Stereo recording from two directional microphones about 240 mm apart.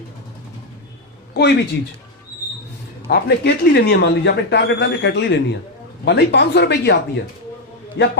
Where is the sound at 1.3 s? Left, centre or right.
Left.